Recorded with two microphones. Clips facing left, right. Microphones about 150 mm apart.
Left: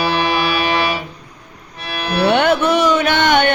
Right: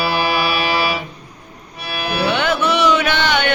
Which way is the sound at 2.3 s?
55° left (ahead or behind).